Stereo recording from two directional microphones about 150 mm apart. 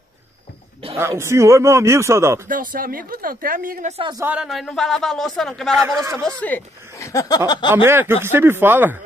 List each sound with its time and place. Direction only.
0.9 s a man's voice: 15° right (ahead or behind)
2.4 s speech: 65° right (ahead or behind)
4.3 s speech: 5° right (ahead or behind)
5.9 s a man's voice: 20° right (ahead or behind)
6.4 s speech: 15° left (ahead or behind)
7.7 s speech: 15° right (ahead or behind)